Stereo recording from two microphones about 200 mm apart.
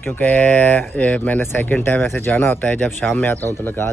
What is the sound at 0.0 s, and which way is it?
Speech, 10° left (ahead or behind).